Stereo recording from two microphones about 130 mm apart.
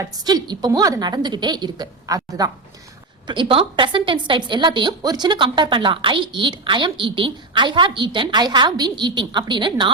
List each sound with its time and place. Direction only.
0.0 s a woman's voice: 30° right (ahead or behind)
3.2 s a woman's voice: 40° right (ahead or behind)